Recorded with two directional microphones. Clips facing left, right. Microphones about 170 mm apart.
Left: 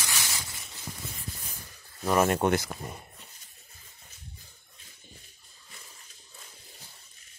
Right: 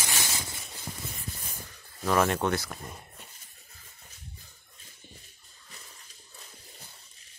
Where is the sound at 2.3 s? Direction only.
20° left (ahead or behind).